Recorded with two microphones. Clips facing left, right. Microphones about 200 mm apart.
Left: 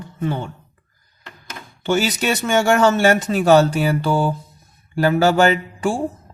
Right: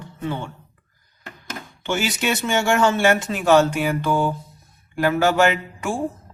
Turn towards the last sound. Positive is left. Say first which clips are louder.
# left 3 dB
turn(degrees=35)  # may be behind; listen again after turning